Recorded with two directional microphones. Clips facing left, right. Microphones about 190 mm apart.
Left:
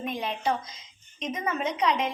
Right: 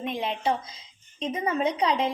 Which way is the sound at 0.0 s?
25° right (ahead or behind).